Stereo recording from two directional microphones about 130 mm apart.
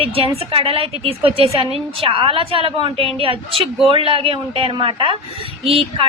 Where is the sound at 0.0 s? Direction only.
45° right (ahead or behind).